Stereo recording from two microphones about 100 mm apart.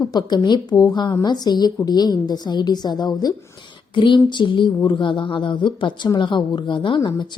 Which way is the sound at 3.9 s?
55° left (ahead or behind).